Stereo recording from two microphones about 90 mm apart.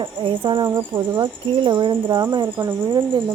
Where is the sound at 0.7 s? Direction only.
35° right (ahead or behind).